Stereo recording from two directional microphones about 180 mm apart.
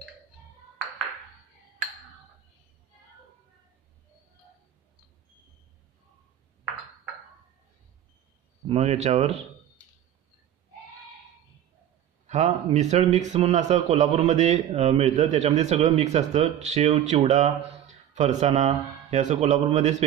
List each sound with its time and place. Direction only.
8.6 s a man's voice: 35° right (ahead or behind)
12.3 s a man's voice: 40° right (ahead or behind)